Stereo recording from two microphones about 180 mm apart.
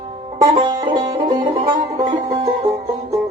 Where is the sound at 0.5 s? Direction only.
25° right (ahead or behind).